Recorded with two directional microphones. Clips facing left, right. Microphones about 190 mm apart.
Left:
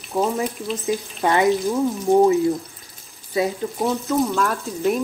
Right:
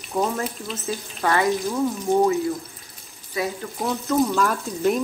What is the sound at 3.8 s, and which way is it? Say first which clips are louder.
Speech: even; centre (ahead or behind).